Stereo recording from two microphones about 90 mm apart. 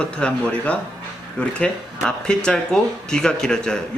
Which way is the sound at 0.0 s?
10° left (ahead or behind).